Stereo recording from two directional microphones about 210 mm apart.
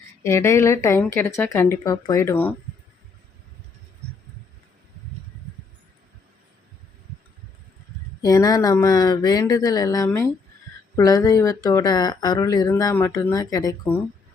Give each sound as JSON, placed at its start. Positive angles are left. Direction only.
{"t": 0.2, "sound": "speech", "side_deg": 10}
{"t": 8.2, "sound": "speech", "side_deg": 15}